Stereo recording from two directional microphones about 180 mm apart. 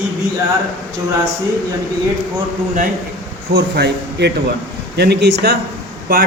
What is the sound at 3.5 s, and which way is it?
A man's voice, 70° right (ahead or behind).